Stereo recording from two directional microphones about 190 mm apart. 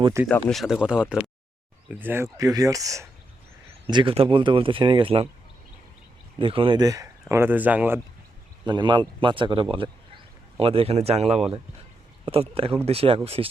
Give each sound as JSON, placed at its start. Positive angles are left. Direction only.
{"t": 0.0, "sound": "speech", "side_deg": -15}
{"t": 0.3, "sound": "speech", "side_deg": 5}
{"t": 6.4, "sound": "speech", "side_deg": -30}
{"t": 8.6, "sound": "speech", "side_deg": -25}